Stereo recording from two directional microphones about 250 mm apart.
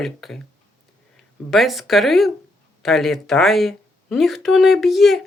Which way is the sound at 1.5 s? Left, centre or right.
Centre.